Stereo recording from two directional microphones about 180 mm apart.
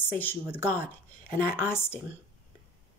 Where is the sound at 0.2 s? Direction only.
10° left (ahead or behind).